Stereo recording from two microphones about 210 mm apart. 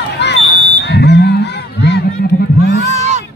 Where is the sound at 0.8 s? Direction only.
55° left (ahead or behind).